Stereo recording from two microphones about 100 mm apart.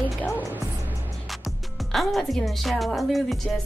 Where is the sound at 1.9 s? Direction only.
Centre (ahead or behind).